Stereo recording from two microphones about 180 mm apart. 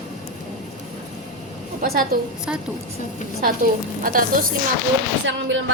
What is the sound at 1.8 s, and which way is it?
Speech, 60° right (ahead or behind).